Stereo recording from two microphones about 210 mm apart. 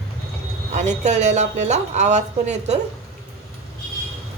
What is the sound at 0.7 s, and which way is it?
Speech, 35° right (ahead or behind).